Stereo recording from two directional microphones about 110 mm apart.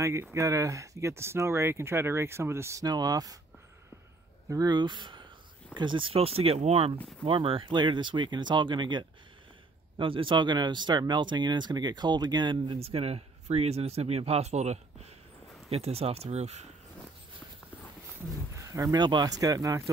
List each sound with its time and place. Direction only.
0.0 s speech: 25° right (ahead or behind)
4.5 s speech: 35° right (ahead or behind); by 6.9 s 70° right (ahead or behind)
7.2 s speech: 55° right (ahead or behind)
12.7 s speech: 65° right (ahead or behind); by 15.1 s 85° right
15.7 s speech: 65° right (ahead or behind)
18.6 s speech: 30° right (ahead or behind)